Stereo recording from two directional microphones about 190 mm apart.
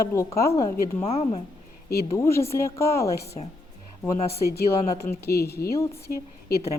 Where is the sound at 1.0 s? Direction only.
30° left (ahead or behind).